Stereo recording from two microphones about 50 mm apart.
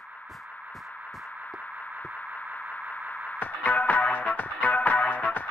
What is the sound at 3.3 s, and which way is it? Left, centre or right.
Music, left.